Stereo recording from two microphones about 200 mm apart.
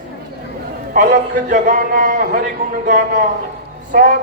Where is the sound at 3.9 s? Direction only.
45° right (ahead or behind).